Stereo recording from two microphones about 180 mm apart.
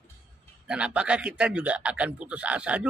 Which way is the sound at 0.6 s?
5° right (ahead or behind).